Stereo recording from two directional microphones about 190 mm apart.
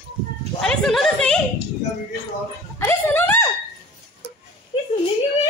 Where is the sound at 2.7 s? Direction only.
10° left (ahead or behind).